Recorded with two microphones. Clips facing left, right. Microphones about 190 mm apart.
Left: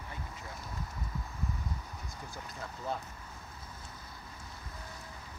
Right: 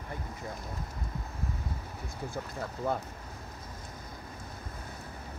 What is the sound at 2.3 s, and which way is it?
Speech, 55° right (ahead or behind).